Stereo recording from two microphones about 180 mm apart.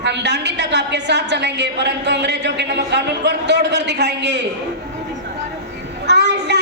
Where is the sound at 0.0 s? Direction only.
70° right (ahead or behind).